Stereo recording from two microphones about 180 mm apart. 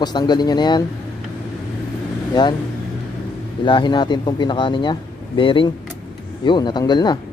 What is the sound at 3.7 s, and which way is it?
Speech, 25° left (ahead or behind).